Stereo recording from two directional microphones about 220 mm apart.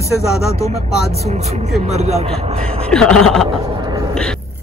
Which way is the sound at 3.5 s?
25° right (ahead or behind).